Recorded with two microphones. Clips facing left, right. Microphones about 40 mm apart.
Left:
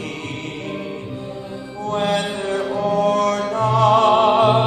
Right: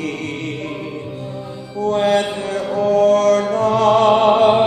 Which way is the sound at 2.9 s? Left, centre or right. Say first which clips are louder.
Right 6 dB; right.